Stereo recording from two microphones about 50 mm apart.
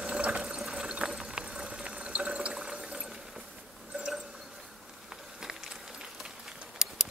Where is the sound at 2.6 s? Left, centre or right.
Centre.